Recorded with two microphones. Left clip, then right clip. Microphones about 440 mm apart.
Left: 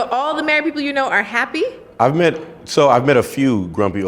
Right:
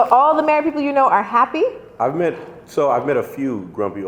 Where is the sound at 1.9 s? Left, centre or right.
Left.